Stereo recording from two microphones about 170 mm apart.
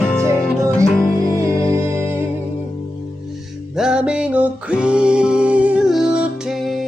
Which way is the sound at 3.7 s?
5° right (ahead or behind).